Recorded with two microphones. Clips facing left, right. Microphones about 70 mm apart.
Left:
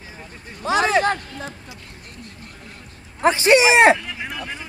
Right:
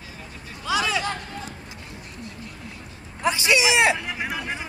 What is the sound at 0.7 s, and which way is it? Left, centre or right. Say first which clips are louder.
Speech: left 6 dB; left.